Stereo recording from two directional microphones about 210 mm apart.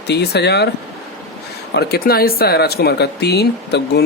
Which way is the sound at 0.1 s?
50° left (ahead or behind).